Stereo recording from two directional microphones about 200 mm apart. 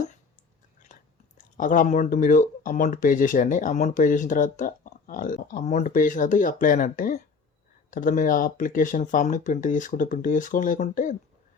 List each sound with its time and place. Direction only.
0.9 s chewing: 40° left (ahead or behind)
1.5 s speech: 40° left (ahead or behind)